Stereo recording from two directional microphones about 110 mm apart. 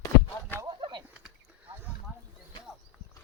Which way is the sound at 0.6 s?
40° right (ahead or behind).